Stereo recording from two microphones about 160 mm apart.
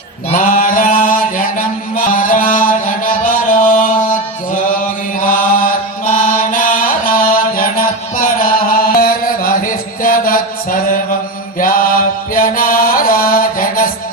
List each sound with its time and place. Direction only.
0.3 s mantra: 55° left (ahead or behind)
6.1 s chant: 55° left (ahead or behind)
9.0 s mantra: 65° left (ahead or behind)
11.6 s chant: 60° left (ahead or behind)